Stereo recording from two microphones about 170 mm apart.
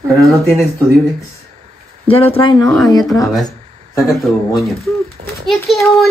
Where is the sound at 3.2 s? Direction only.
Centre (ahead or behind).